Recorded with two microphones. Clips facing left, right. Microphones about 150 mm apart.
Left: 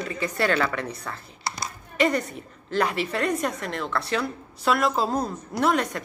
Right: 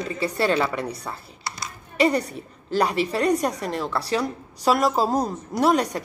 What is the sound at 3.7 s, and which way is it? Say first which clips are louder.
Speech: right 2 dB; 10° right (ahead or behind).